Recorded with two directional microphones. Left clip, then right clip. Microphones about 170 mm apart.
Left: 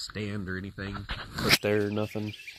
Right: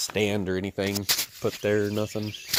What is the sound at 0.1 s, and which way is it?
Speech, 20° right (ahead or behind).